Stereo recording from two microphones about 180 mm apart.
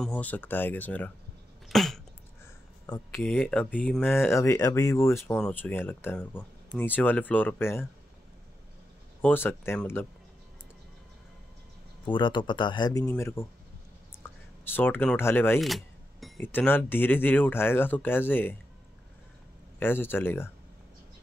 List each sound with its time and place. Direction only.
0.0 s speech: 10° left (ahead or behind)
1.7 s cough: centre (ahead or behind)
3.2 s speech: centre (ahead or behind)
9.2 s speech: 10° left (ahead or behind)
12.1 s speech: 25° left (ahead or behind)
13.0 s speech: 10° left (ahead or behind)
15.6 s keys jangling: centre (ahead or behind)
16.3 s speech: 10° left (ahead or behind)
19.8 s speech: 10° left (ahead or behind)